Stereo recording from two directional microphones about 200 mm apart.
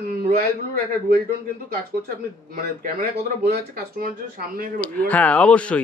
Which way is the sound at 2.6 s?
45° right (ahead or behind).